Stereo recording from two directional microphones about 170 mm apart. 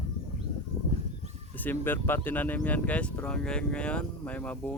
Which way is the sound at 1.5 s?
10° left (ahead or behind).